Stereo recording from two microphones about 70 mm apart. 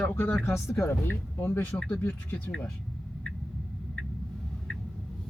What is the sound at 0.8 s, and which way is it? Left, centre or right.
Speech, left.